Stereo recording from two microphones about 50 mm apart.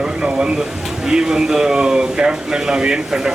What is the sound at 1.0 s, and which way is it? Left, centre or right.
Speech, centre.